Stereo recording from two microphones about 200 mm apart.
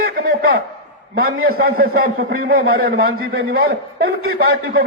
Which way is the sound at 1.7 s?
50° right (ahead or behind).